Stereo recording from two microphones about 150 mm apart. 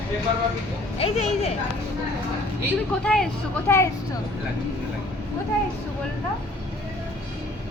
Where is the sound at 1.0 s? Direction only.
45° left (ahead or behind).